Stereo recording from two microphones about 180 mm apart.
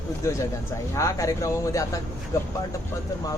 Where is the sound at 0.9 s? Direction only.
15° left (ahead or behind).